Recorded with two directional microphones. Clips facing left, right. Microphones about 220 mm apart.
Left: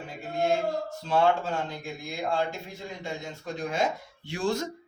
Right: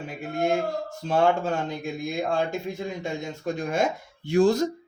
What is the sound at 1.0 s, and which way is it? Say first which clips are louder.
Speech: right 3 dB; 45° right (ahead or behind).